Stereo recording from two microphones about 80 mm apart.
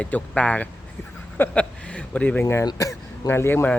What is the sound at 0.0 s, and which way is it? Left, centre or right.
Speech, centre.